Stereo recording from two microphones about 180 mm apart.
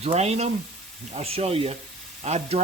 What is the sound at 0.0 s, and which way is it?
Sizzle, 35° right (ahead or behind).